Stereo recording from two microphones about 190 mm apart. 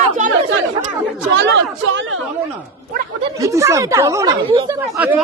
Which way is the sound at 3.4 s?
15° right (ahead or behind).